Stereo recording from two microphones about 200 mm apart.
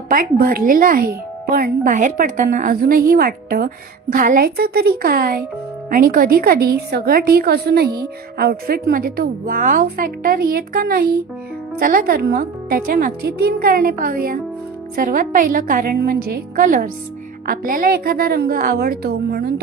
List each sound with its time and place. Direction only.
0.1 s a woman's voice: 45° right (ahead or behind)